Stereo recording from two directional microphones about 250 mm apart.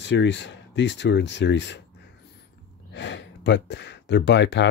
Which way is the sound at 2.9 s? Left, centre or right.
Left.